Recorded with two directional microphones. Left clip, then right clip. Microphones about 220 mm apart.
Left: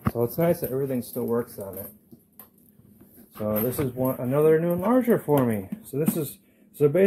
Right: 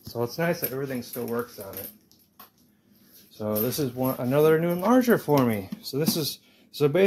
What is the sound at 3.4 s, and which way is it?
Speech, 15° right (ahead or behind).